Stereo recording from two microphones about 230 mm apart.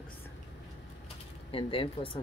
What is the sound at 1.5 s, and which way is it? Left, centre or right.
Speech, left.